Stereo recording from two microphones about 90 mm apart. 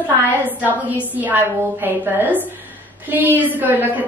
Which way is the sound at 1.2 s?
20° right (ahead or behind).